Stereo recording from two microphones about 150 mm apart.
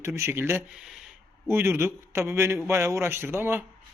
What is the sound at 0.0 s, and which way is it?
Speech, 15° right (ahead or behind).